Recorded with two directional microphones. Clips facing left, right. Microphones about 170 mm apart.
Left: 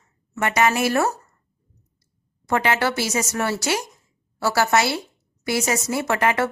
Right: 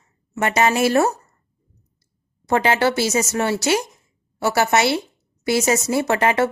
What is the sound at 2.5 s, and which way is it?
A woman's voice, 30° right (ahead or behind).